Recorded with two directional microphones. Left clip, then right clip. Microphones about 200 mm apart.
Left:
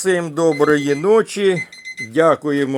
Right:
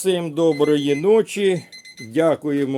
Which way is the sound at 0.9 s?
10° right (ahead or behind).